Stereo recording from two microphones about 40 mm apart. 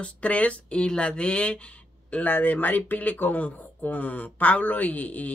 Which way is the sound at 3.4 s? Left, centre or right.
Left.